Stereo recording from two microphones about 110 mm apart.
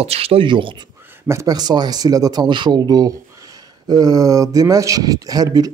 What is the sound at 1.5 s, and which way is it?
Speech, 40° right (ahead or behind).